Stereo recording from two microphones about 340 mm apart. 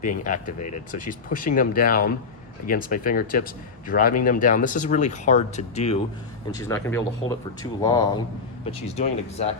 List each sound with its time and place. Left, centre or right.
0.3 s speech: left
6.6 s speech: centre